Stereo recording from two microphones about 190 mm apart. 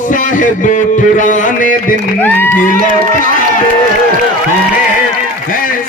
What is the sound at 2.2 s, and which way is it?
Speech, 10° left (ahead or behind).